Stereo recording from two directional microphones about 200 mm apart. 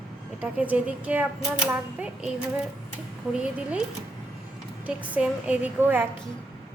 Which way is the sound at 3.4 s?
5° right (ahead or behind).